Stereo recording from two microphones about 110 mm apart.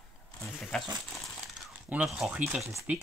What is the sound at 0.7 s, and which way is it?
Speech, 5° left (ahead or behind).